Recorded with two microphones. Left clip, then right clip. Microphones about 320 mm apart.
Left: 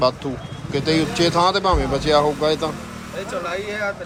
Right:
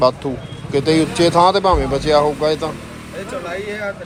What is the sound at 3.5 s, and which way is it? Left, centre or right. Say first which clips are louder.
Speech: right 1 dB; left.